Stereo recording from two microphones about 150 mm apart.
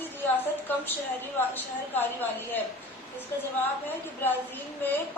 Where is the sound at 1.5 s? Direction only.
10° left (ahead or behind).